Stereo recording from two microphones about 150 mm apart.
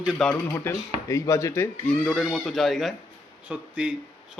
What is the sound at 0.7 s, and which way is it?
Speech, 15° left (ahead or behind).